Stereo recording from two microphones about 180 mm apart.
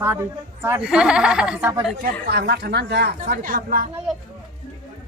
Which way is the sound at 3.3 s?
55° right (ahead or behind).